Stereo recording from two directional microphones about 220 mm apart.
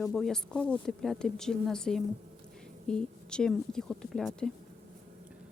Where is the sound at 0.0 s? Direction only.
Centre (ahead or behind).